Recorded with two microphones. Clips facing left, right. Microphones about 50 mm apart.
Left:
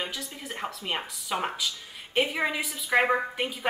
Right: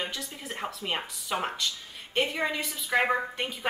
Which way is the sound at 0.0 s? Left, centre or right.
Centre.